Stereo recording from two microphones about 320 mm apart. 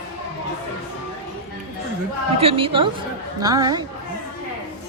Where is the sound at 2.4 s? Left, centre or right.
Centre.